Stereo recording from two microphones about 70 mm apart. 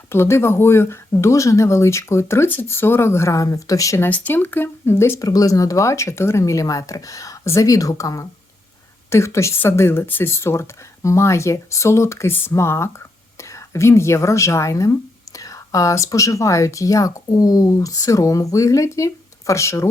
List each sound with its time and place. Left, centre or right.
0.1 s speech: left
4.1 s speech: left
5.2 s speech: left
6.4 s speech: left
9.0 s speech: left